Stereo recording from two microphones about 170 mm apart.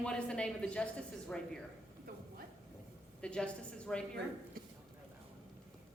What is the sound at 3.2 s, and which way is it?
Speech, 5° left (ahead or behind).